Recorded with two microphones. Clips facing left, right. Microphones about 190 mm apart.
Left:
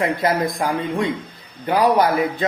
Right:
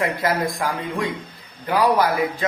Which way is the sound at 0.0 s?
20° left (ahead or behind).